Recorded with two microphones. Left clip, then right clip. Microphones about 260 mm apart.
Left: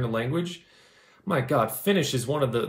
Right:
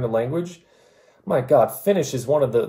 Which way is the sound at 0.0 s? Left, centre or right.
Centre.